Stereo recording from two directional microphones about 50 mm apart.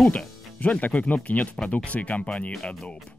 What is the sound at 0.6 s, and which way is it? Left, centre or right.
Speech, left.